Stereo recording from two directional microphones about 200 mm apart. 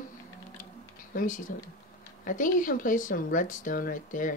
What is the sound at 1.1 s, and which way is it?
Speech, 40° left (ahead or behind).